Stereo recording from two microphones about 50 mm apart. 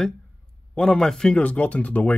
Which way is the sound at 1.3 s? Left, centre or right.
Left.